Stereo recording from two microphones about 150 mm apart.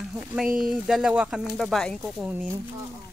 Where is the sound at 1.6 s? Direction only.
Centre (ahead or behind).